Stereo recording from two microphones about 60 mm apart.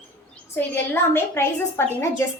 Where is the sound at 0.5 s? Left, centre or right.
Left.